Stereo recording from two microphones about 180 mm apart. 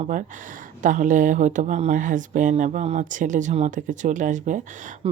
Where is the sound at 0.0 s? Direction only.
45° right (ahead or behind).